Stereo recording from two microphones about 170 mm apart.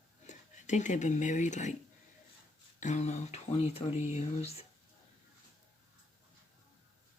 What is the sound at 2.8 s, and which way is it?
Speech, 45° left (ahead or behind).